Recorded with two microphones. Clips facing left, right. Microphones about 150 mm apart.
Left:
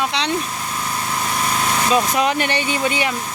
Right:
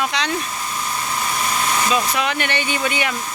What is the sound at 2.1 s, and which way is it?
Speech, 40° left (ahead or behind).